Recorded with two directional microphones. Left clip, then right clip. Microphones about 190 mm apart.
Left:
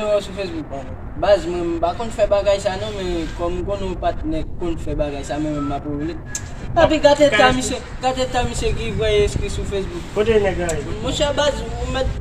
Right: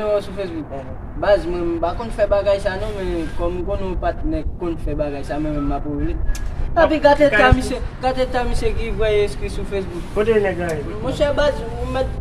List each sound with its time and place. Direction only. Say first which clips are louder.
0.0 s speech: left 1 dB; 10° left (ahead or behind)